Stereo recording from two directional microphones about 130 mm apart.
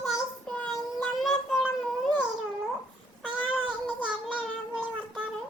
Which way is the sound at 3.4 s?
5° right (ahead or behind).